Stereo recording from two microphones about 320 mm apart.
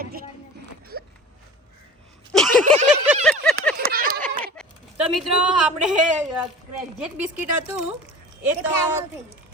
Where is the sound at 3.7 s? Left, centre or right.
Right.